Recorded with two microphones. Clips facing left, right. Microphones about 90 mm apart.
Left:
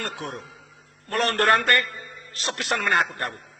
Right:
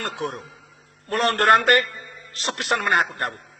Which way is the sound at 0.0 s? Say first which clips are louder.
Right 4 dB; 55° right (ahead or behind).